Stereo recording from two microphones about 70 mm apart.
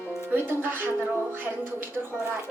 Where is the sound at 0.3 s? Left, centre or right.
Right.